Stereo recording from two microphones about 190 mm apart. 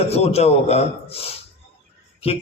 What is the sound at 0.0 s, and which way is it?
A man's voice, 35° left (ahead or behind).